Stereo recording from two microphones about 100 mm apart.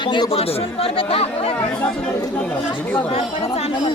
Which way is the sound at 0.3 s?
85° left.